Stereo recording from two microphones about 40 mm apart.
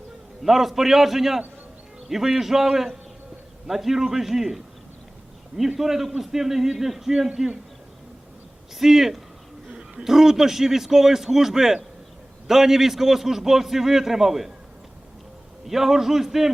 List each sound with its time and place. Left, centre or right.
0.4 s a man's voice: centre
8.8 s a man's voice: centre
15.6 s a man's voice: centre